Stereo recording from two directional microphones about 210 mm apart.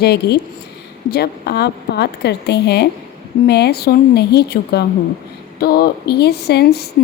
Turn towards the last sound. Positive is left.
turn(degrees=50)  # may be behind; listen again after turning